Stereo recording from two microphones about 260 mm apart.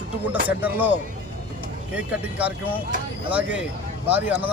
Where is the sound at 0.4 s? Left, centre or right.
Centre.